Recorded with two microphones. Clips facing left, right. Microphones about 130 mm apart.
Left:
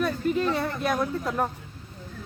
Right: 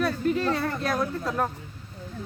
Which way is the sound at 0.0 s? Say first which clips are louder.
Even; centre (ahead or behind).